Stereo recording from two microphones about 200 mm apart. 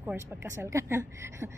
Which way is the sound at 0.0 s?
10° right (ahead or behind).